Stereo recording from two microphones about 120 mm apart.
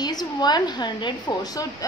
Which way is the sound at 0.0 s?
35° left (ahead or behind).